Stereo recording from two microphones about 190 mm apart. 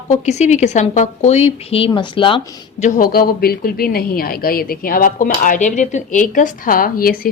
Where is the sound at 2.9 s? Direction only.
50° left (ahead or behind).